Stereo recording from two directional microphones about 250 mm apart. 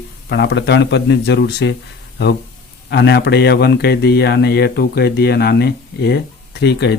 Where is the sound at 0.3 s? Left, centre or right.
Left.